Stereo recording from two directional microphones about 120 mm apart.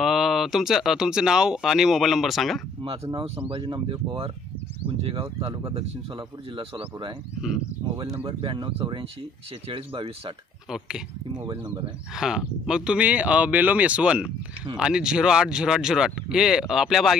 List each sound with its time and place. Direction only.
0.0 s speech: centre (ahead or behind)
3.2 s speech: 45° right (ahead or behind)
5.5 s speech: 30° right (ahead or behind)
6.1 s speech: 45° right (ahead or behind)
8.2 s speech: 45° right (ahead or behind)
12.2 s speech: 5° right (ahead or behind)